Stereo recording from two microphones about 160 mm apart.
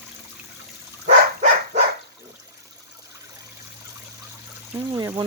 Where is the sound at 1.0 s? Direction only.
45° right (ahead or behind).